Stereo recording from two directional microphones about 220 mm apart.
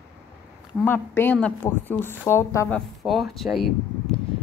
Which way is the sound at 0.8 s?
10° left (ahead or behind).